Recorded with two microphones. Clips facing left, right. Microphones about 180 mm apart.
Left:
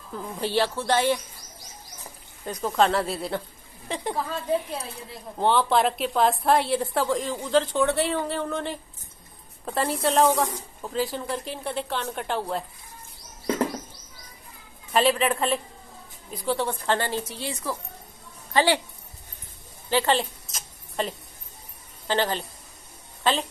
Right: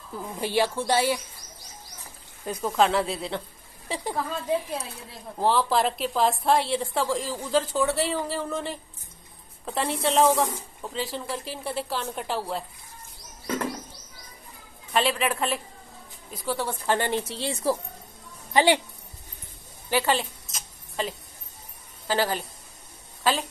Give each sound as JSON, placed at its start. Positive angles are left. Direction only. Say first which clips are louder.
{"t": 0.4, "sound": "a woman's voice", "louder": "even", "side_deg": -10}
{"t": 2.4, "sound": "a woman's voice", "louder": "even", "side_deg": -10}
{"t": 14.9, "sound": "a woman's voice", "louder": "left 3 dB", "side_deg": 0}
{"t": 17.2, "sound": "speech", "louder": "right 3 dB", "side_deg": -25}
{"t": 18.5, "sound": "a woman's voice", "louder": "right 1 dB", "side_deg": -15}
{"t": 19.9, "sound": "a woman's voice", "louder": "left 1 dB", "side_deg": -10}
{"t": 20.2, "sound": "a sound", "louder": "left 3 dB", "side_deg": 0}
{"t": 22.0, "sound": "a man's voice", "louder": "even", "side_deg": -10}